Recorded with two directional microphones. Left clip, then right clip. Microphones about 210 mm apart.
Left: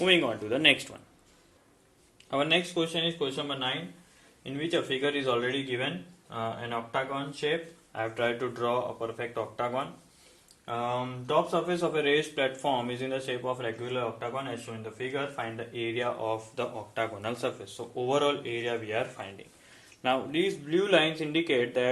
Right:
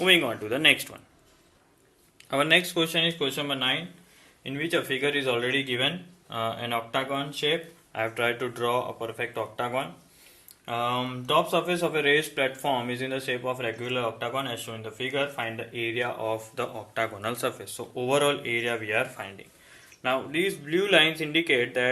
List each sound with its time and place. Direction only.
0.0 s speech: centre (ahead or behind)
2.3 s speech: 20° right (ahead or behind)
4.4 s speech: 10° right (ahead or behind)
6.3 s speech: 30° right (ahead or behind)
7.9 s speech: 10° right (ahead or behind)
20.0 s speech: 10° left (ahead or behind)